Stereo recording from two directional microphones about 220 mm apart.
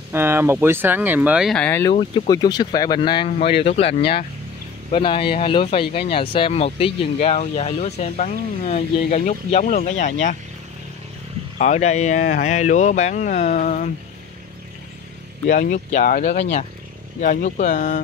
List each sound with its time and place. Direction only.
0.1 s speech: 10° right (ahead or behind); by 1.9 s 5° left (ahead or behind)
1.9 s speech: 20° left (ahead or behind)
4.9 s speech: 25° left (ahead or behind)
11.5 s speech: 30° left (ahead or behind)
15.5 s speech: 35° left (ahead or behind)